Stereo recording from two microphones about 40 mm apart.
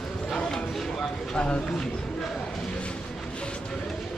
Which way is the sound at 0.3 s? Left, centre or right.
Centre.